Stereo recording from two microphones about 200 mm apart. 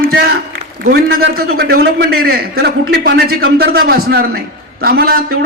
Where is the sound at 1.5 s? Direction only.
50° right (ahead or behind).